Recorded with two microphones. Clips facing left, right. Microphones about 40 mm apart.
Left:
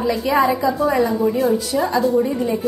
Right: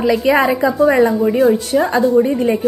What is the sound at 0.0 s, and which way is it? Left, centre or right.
A woman's voice, right.